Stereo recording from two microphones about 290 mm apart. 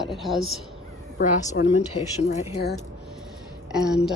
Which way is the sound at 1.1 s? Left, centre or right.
Left.